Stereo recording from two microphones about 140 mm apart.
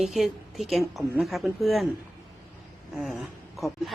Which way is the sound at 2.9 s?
Centre (ahead or behind).